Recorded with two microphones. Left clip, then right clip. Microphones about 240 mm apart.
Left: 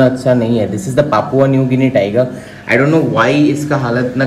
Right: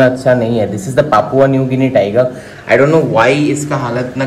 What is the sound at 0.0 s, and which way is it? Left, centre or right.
A man's voice, centre.